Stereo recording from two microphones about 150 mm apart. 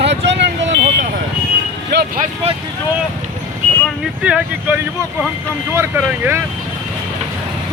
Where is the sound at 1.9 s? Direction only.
90° right.